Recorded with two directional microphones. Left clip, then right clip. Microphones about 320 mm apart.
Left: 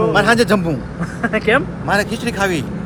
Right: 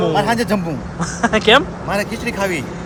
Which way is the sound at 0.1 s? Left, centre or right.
Centre.